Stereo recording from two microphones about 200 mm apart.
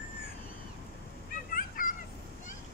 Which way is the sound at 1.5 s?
45° left (ahead or behind).